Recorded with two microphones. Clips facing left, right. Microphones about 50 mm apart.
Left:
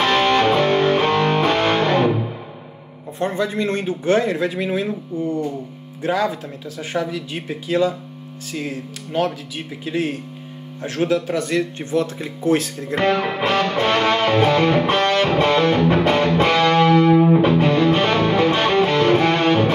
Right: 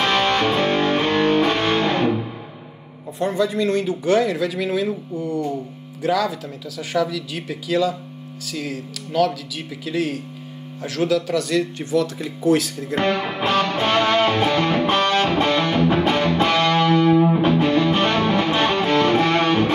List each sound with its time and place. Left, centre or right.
0.0 s music: centre
3.2 s speech: left
12.9 s music: centre